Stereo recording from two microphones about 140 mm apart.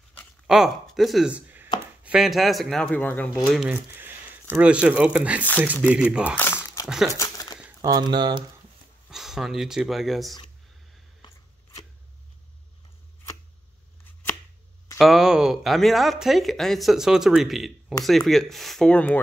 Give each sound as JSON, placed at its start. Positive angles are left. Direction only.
{"t": 0.5, "sound": "a man's voice", "side_deg": 0}
{"t": 3.4, "sound": "a man's voice", "side_deg": -5}
{"t": 3.7, "sound": "a sound", "side_deg": -15}
{"t": 4.6, "sound": "speech", "side_deg": -10}
{"t": 6.3, "sound": "crumpling", "side_deg": 15}
{"t": 7.8, "sound": "speech", "side_deg": -30}
{"t": 9.1, "sound": "a man's voice", "side_deg": -5}
{"t": 15.0, "sound": "a man's voice", "side_deg": 0}